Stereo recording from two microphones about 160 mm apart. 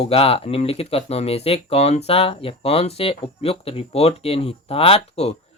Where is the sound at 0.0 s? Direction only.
35° left (ahead or behind).